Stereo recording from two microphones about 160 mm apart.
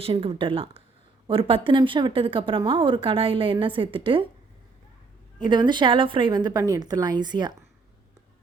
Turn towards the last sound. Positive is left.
turn(degrees=-25)  # may be behind; listen again after turning